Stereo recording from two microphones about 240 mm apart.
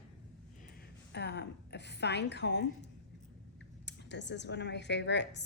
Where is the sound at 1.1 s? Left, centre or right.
Left.